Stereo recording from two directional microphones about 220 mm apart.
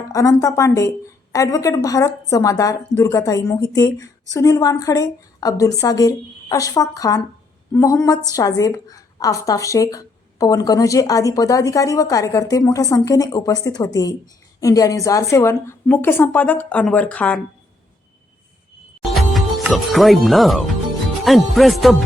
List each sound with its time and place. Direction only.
0.1 s a woman's voice: 15° left (ahead or behind)
19.1 s speech: centre (ahead or behind)